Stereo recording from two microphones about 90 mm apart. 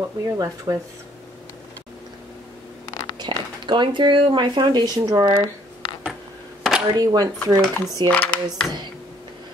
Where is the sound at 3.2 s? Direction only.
60° right (ahead or behind).